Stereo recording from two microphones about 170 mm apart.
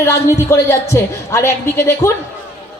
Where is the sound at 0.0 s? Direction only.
15° left (ahead or behind).